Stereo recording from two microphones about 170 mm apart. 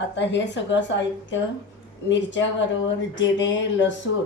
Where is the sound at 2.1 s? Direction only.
90° left.